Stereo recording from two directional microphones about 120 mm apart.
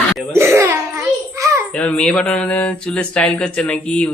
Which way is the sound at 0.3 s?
20° right (ahead or behind).